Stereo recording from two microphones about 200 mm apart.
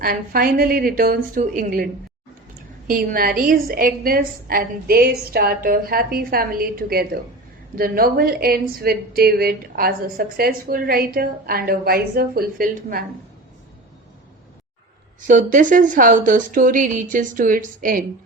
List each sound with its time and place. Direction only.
0.0 s speech: 45° right (ahead or behind)
15.3 s speech: 40° right (ahead or behind)